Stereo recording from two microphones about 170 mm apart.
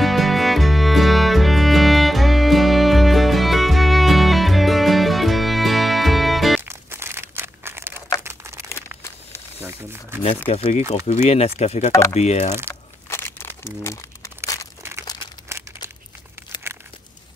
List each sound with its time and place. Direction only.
0.0 s music: centre (ahead or behind)
6.6 s crumpling: 15° right (ahead or behind)
8.6 s crumpling: 15° left (ahead or behind)
9.6 s crumpling: 15° right (ahead or behind)
10.5 s speech: 35° left (ahead or behind)
13.8 s crumpling: 20° left (ahead or behind)
14.8 s crumpling: 15° right (ahead or behind)